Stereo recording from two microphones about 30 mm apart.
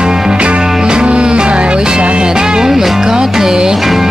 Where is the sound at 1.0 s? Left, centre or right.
Right.